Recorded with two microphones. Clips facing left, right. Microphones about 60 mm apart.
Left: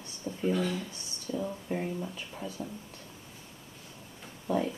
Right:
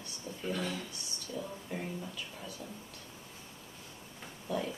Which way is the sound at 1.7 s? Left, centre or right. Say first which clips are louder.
Left 5 dB; left.